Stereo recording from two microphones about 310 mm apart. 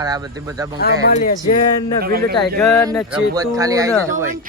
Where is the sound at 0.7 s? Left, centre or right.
Left.